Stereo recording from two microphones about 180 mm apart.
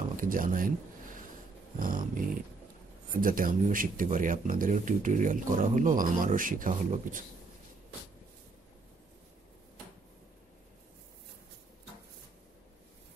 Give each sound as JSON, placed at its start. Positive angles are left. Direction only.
{"t": 0.1, "sound": "speech", "side_deg": -50}
{"t": 1.8, "sound": "speech", "side_deg": -50}